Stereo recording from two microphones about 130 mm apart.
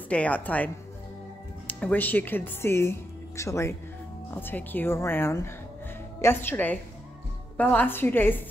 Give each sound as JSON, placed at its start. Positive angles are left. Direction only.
{"t": 0.1, "sound": "a woman's voice", "side_deg": 10}
{"t": 1.7, "sound": "a woman's voice", "side_deg": 10}